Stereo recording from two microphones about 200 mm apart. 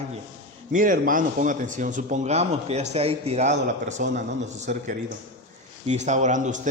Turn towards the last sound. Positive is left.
turn(degrees=-40)  # may be behind; listen again after turning